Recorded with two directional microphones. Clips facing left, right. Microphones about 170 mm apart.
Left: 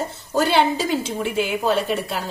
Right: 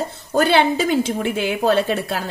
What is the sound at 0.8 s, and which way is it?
A woman's voice, 60° right (ahead or behind).